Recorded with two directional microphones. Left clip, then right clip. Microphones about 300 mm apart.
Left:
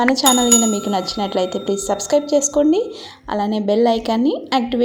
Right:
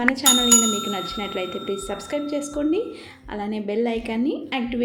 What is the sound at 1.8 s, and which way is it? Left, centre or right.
Speech, left.